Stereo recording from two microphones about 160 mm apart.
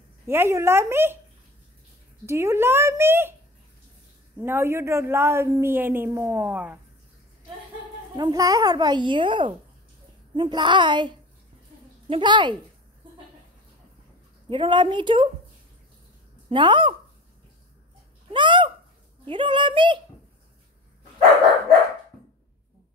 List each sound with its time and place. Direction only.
0.3 s speech: 15° right (ahead or behind)
2.2 s speech: 15° right (ahead or behind)
4.4 s speech: 15° right (ahead or behind)
8.2 s a child's voice: 20° right (ahead or behind)
14.5 s speech: 30° right (ahead or behind)
16.4 s speech: 30° right (ahead or behind)
18.3 s a sound: 30° right (ahead or behind)
19.2 s speech: 30° right (ahead or behind)